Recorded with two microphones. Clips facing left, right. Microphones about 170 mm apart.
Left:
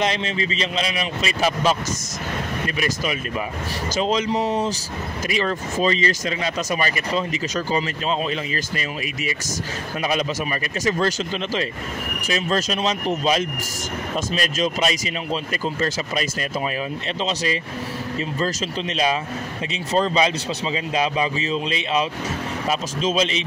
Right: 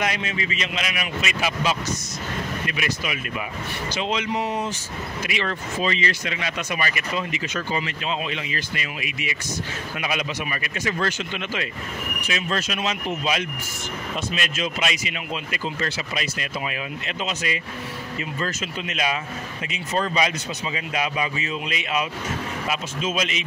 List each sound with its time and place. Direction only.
0.0 s speech: 30° left (ahead or behind)
2.8 s a man's voice: 35° left (ahead or behind)